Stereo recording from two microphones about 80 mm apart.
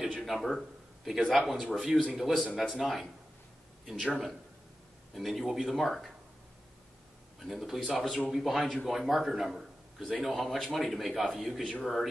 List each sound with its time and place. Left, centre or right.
0.1 s a man's voice: centre
7.3 s a man's voice: centre